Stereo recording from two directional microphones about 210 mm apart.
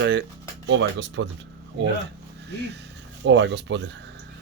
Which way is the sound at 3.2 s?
55° right (ahead or behind).